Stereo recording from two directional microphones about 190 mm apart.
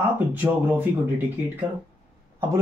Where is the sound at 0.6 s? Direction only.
10° right (ahead or behind).